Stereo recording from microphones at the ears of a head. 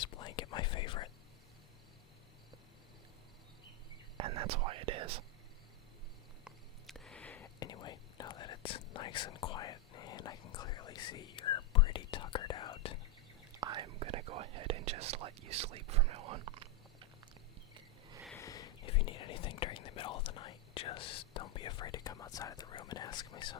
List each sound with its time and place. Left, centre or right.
0.0 s whispering: left
4.2 s whispering: right
7.3 s whispering: left
13.5 s whispering: right
18.3 s whispering: left